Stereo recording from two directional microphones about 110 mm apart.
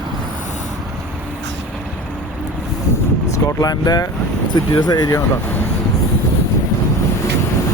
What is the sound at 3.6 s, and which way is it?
Speech, 35° left (ahead or behind).